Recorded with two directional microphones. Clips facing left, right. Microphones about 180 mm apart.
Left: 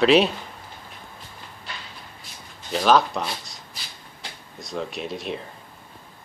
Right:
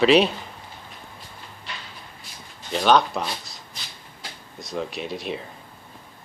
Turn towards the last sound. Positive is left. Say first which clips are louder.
# even
turn(degrees=0)  # may be behind; listen again after turning